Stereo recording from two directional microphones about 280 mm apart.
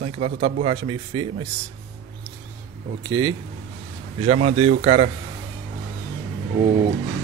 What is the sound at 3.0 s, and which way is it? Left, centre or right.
Speech, centre.